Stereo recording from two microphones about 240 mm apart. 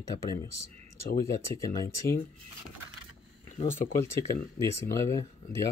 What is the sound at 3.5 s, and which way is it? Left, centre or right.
Speech, left.